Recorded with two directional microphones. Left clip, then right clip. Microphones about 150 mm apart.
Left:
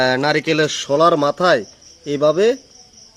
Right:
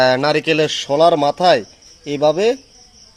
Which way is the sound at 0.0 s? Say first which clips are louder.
Right 2 dB; 20° left (ahead or behind).